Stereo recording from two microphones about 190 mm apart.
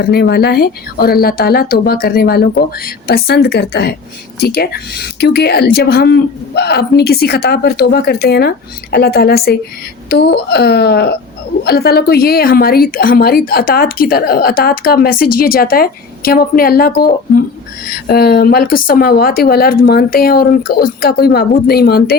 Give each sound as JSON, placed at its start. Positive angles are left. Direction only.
{"t": 0.0, "sound": "a woman's voice", "side_deg": 55}